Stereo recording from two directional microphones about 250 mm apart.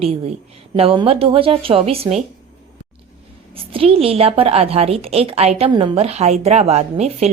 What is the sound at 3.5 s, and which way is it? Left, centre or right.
A woman's voice, right.